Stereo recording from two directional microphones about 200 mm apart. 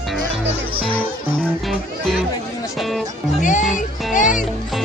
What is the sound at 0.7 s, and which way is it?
Speech, 25° right (ahead or behind).